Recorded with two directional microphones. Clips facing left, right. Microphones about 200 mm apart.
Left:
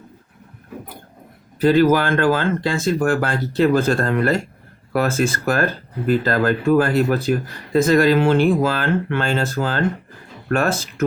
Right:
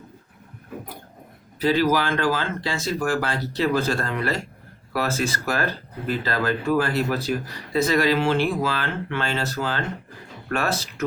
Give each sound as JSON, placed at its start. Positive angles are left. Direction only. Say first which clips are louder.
{"t": 1.5, "sound": "speech", "louder": "left 6 dB", "side_deg": 50}